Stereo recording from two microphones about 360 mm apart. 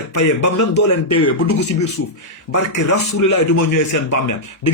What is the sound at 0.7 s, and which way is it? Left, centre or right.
Speech, left.